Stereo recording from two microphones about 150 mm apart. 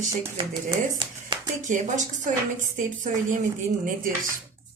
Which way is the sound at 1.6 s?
55° right (ahead or behind).